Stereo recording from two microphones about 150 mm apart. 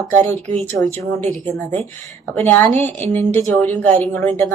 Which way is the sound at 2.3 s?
10° left (ahead or behind).